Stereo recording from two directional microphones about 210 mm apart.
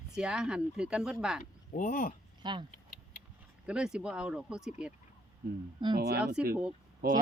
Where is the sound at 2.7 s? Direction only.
40° left (ahead or behind).